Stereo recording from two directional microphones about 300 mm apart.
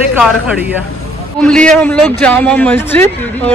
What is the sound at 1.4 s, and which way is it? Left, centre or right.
Speech, centre.